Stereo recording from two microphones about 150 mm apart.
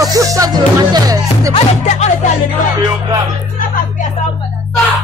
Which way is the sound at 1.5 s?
50° left (ahead or behind).